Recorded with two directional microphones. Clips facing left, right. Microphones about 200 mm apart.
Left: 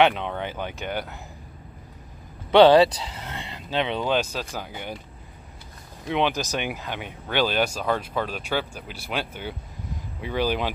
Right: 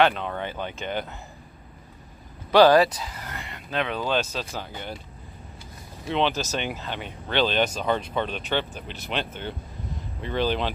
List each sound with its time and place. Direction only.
0.0 s speech: 15° left (ahead or behind)
3.2 s a sound: 25° left (ahead or behind)
4.0 s speech: 10° left (ahead or behind)
6.0 s speech: 15° left (ahead or behind)